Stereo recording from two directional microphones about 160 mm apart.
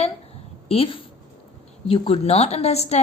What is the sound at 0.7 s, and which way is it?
Speech, 35° left (ahead or behind).